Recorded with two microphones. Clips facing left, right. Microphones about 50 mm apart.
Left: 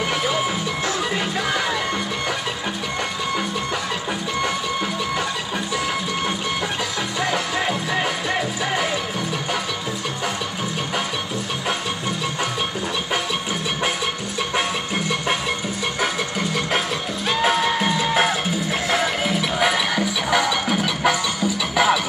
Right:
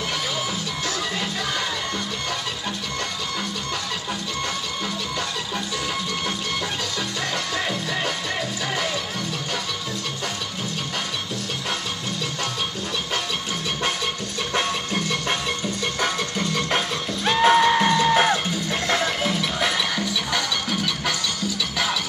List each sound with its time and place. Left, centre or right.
7.2 s music: centre
14.5 s music: centre